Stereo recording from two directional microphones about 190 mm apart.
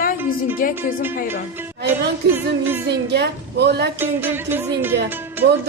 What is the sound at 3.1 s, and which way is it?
Speech, 60° right (ahead or behind).